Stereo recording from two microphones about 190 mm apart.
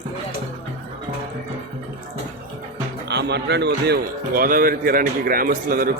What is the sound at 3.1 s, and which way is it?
Speech, 65° right (ahead or behind).